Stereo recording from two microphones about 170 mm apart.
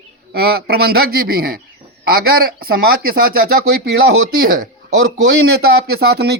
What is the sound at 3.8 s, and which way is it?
Speech, 85° right.